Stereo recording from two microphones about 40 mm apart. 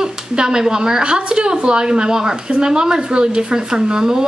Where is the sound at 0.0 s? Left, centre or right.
Centre.